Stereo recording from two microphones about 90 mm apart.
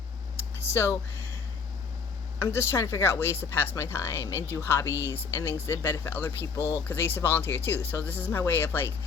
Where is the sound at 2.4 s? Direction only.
30° left (ahead or behind).